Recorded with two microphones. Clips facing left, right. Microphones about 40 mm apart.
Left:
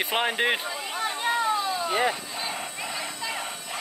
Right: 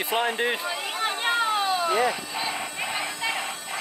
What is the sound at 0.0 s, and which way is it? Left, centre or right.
Speech, left.